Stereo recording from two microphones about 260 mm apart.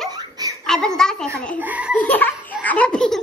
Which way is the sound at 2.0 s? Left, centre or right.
Centre.